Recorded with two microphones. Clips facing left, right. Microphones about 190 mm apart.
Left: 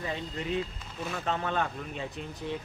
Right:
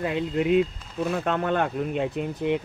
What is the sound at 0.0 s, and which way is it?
Speech, 70° right (ahead or behind).